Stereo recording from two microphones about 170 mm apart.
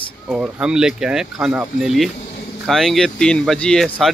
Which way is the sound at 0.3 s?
5° right (ahead or behind).